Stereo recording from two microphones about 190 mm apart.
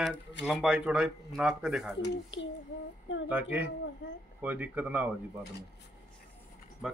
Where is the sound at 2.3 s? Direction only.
80° left.